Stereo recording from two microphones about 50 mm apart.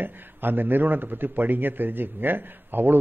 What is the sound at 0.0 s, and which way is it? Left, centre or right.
A man's voice, right.